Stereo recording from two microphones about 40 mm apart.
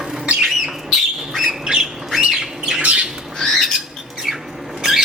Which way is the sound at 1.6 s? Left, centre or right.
Centre.